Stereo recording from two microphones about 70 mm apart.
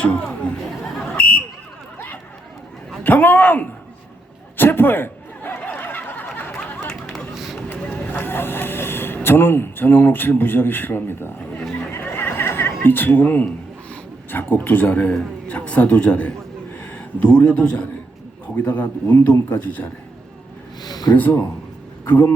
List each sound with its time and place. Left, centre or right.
0.0 s chatter: centre
1.1 s buzzer: left
3.0 s a man's voice: left
4.5 s a sound: left
6.8 s a sound: centre
7.3 s run: centre
7.7 s speech: left
11.9 s chuckle: left
14.3 s a man's voice: left
20.8 s a sound: left
21.2 s a man's voice: left